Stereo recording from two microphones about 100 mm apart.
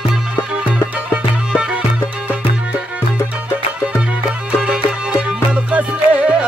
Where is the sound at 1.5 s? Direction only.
5° right (ahead or behind).